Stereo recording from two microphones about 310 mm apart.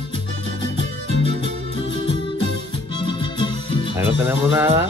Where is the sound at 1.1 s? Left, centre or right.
Right.